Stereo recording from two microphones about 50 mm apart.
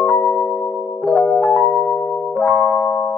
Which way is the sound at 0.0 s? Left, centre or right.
Left.